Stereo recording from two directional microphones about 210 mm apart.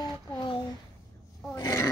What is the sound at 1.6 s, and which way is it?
Roar, 15° left (ahead or behind).